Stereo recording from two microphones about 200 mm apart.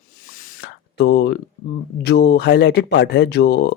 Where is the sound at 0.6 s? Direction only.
60° left (ahead or behind).